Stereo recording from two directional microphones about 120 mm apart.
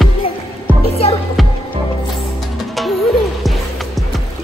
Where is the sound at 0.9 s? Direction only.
55° left (ahead or behind).